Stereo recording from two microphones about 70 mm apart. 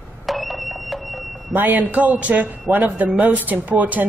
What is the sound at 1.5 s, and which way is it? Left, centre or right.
A woman's voice, right.